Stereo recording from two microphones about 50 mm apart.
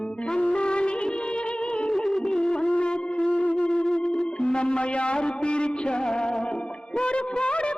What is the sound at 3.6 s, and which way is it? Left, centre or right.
Music, centre.